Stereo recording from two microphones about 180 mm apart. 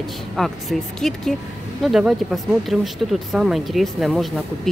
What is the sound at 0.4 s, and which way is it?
Speech, centre (ahead or behind).